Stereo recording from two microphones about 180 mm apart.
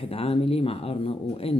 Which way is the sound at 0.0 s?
35° left (ahead or behind).